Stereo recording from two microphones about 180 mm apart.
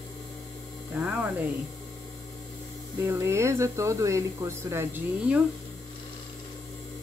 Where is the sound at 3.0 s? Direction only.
15° right (ahead or behind).